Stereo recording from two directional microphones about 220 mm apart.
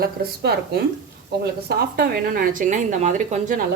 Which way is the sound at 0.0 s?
45° right (ahead or behind).